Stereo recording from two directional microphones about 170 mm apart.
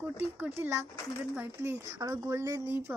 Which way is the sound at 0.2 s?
10° right (ahead or behind).